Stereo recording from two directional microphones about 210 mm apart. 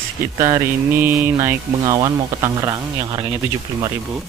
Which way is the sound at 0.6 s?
10° right (ahead or behind).